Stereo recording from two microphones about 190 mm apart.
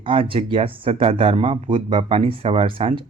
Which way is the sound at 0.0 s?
30° right (ahead or behind).